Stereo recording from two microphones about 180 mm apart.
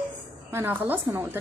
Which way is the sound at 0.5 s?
10° right (ahead or behind).